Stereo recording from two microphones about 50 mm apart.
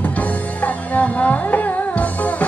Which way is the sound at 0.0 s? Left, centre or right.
Left.